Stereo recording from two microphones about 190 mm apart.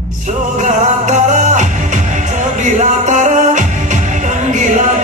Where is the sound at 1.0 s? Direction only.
40° right (ahead or behind).